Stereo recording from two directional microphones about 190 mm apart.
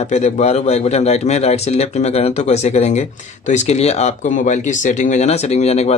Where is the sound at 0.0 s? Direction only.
40° left (ahead or behind).